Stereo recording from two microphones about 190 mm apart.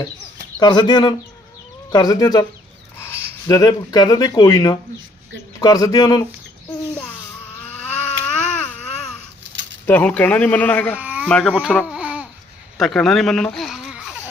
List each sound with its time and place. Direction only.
0.6 s speech: 25° left (ahead or behind)
7.7 s a sound: 5° left (ahead or behind)
9.8 s speech: 10° left (ahead or behind)
10.9 s a sound: 10° right (ahead or behind)
11.3 s speech: 5° left (ahead or behind)
11.9 s babbling: 5° right (ahead or behind)
12.7 s speech: centre (ahead or behind)